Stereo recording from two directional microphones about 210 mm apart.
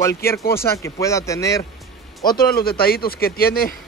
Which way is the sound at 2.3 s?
45° left (ahead or behind).